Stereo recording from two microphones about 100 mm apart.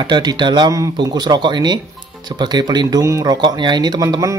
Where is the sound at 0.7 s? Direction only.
40° right (ahead or behind).